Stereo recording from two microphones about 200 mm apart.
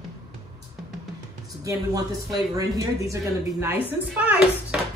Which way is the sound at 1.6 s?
15° right (ahead or behind).